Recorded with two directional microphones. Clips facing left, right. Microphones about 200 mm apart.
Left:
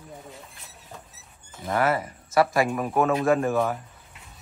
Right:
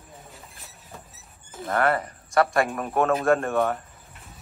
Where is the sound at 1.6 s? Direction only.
5° left (ahead or behind).